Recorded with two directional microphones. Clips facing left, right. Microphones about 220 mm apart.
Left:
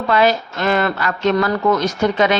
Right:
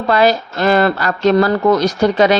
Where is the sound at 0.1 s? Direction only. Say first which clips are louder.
Right 3 dB; 35° right (ahead or behind).